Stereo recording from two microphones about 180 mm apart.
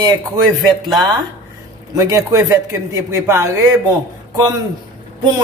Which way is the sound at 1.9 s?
20° right (ahead or behind).